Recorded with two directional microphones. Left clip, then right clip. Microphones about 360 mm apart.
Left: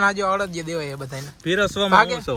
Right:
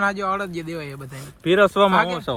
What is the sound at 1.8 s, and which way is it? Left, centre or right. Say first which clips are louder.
Speech: left 2 dB; centre.